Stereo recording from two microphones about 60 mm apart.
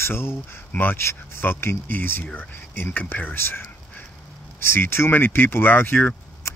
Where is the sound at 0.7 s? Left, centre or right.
Left.